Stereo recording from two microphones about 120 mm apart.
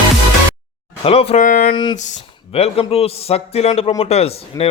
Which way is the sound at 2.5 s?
55° left (ahead or behind).